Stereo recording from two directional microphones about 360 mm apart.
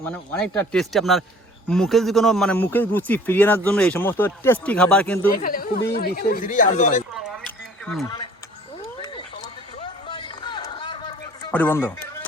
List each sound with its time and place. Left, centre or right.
0.0 s speech: centre
5.4 s speech: left
7.1 s a sound: centre
7.9 s speech: centre
8.8 s cat: centre
9.8 s a sound: centre